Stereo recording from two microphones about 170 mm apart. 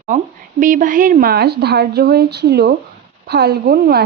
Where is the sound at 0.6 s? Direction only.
50° right (ahead or behind).